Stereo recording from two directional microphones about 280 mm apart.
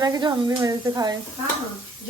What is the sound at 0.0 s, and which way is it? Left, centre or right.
Sizzle, centre.